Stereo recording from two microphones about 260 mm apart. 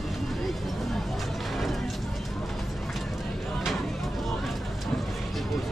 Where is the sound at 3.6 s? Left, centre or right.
Centre.